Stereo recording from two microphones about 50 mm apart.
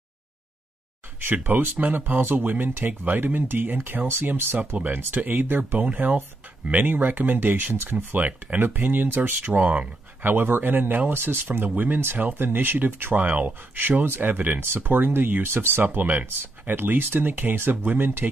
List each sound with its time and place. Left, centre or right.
1.2 s speech: right
4.7 s speech: right
7.7 s speech: right
8.2 s speech: right
8.5 s speech: right
9.5 s speech: right
10.2 s speech: right